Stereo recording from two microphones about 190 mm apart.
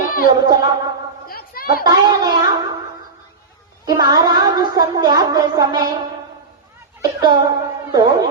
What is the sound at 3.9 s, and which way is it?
A woman's voice, 20° right (ahead or behind).